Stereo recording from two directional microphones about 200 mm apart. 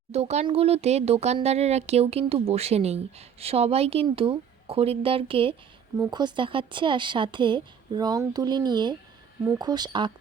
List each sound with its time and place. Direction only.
0.1 s speech: 35° right (ahead or behind)